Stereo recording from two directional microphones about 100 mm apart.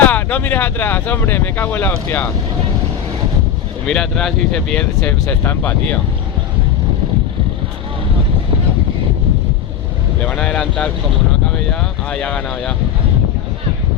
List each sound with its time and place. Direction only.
0.0 s speech: 15° left (ahead or behind)
3.8 s speech: 5° left (ahead or behind)
4.8 s speech: 15° left (ahead or behind)
10.2 s speech: 10° left (ahead or behind)